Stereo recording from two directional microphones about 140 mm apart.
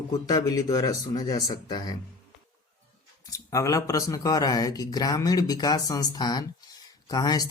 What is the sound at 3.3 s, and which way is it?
A man's voice, 25° left (ahead or behind).